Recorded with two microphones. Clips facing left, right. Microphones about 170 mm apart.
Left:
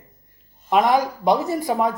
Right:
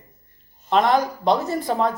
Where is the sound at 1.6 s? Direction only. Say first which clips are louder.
Even; 20° left (ahead or behind).